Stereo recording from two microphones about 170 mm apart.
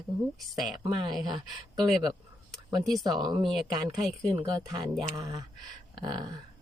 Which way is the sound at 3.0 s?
20° right (ahead or behind).